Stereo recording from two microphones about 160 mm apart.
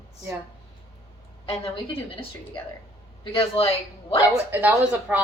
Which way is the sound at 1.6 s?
35° left (ahead or behind).